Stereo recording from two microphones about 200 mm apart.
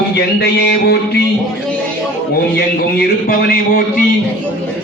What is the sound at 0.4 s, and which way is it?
Music, 55° left (ahead or behind).